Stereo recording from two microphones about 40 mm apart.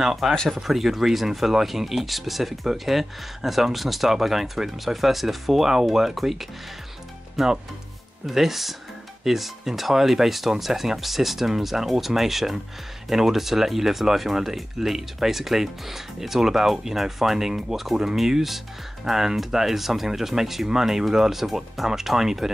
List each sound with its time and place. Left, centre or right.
0.0 s speech: centre